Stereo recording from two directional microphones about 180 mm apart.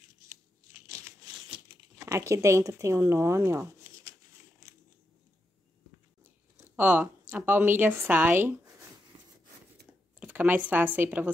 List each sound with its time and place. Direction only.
0.8 s tearing: 15° right (ahead or behind)
6.8 s a woman's voice: 10° right (ahead or behind)
10.2 s speech: 10° right (ahead or behind)